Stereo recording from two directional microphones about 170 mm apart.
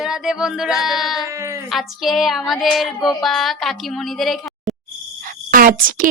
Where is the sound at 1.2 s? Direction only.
15° right (ahead or behind).